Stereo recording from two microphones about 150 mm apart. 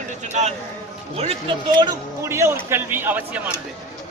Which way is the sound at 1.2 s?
40° right (ahead or behind).